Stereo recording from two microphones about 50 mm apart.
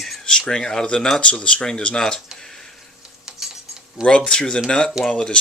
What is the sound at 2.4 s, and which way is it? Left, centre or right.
Tick-tock, centre.